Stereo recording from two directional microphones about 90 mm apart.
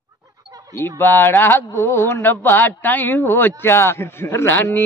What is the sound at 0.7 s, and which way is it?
Speech, 25° left (ahead or behind).